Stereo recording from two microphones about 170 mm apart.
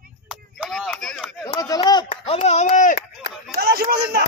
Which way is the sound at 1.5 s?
25° left (ahead or behind).